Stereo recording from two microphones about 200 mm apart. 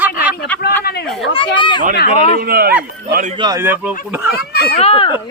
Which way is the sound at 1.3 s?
25° left (ahead or behind).